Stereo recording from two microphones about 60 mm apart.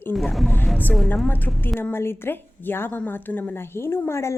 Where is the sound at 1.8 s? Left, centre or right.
Left.